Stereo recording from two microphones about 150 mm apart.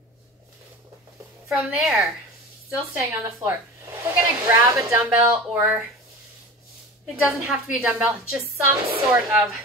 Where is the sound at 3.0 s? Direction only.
20° right (ahead or behind).